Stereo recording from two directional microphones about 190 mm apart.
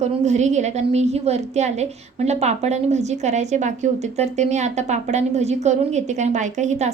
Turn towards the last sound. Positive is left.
turn(degrees=-40)  # may be behind; listen again after turning